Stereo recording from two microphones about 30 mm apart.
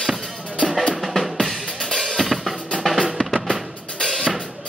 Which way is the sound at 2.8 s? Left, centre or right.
Centre.